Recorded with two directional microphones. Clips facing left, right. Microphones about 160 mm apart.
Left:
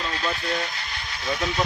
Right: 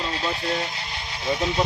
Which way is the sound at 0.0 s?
25° right (ahead or behind).